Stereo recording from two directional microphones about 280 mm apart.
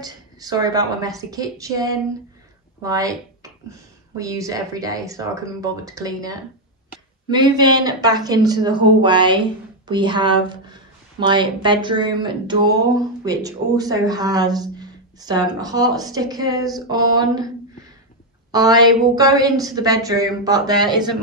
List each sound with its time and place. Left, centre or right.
0.0 s speech: centre
18.5 s speech: centre